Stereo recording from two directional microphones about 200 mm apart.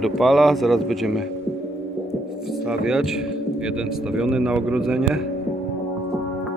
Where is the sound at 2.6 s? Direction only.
5° right (ahead or behind).